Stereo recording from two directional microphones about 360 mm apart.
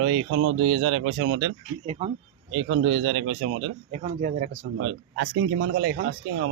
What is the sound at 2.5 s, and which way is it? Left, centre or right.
A man's voice, right.